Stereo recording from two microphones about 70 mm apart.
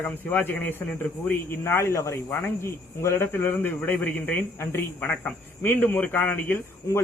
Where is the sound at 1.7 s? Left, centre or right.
Left.